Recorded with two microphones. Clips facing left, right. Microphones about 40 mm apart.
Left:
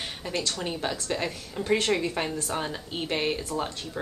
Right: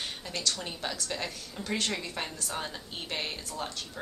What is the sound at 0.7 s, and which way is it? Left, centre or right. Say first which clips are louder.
A woman's voice: left 6 dB; centre.